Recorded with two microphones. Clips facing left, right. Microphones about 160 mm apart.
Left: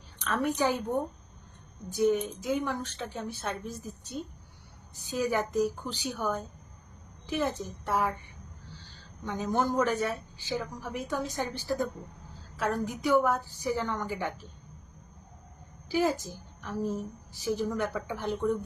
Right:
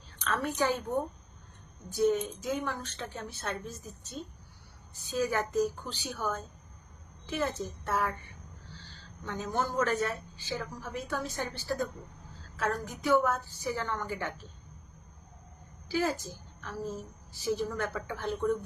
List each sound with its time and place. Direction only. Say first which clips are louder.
0.3 s a woman's voice: left 2 dB; 15° left (ahead or behind)
15.9 s a woman's voice: left 3 dB; 15° left (ahead or behind)